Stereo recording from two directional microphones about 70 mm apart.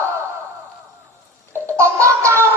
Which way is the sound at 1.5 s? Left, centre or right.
Right.